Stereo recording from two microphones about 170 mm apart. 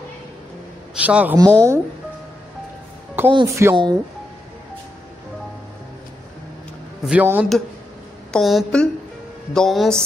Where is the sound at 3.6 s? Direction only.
15° right (ahead or behind).